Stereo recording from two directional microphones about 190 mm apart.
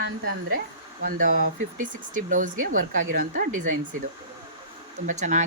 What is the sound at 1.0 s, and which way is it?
Speech, 45° right (ahead or behind).